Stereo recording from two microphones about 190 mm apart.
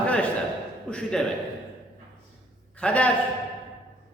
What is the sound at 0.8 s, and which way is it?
Speech, 5° left (ahead or behind).